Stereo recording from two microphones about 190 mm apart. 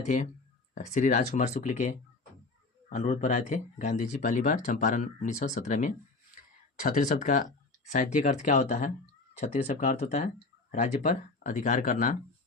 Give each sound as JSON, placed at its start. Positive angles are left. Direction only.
{"t": 0.0, "sound": "speech", "side_deg": 40}